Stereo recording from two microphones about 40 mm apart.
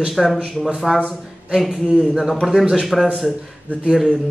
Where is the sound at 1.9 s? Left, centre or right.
Right.